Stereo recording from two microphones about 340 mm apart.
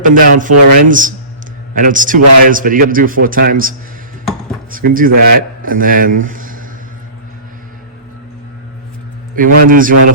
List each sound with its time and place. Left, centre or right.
0.0 s a man's voice: right
9.3 s a man's voice: right